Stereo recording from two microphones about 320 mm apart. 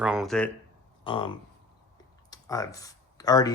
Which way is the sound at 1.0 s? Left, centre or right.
Centre.